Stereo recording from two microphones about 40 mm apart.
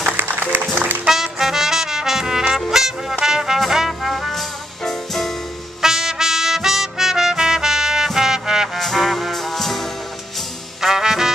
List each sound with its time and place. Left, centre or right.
0.2 s music: right
1.0 s music: centre
4.0 s brass instrument: centre
5.8 s trumpet: centre
8.1 s music: centre
8.7 s music: centre
10.8 s music: centre